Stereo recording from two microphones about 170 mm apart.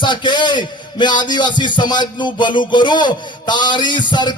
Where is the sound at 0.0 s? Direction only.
25° left (ahead or behind).